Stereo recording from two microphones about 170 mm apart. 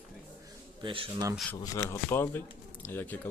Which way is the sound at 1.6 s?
20° left (ahead or behind).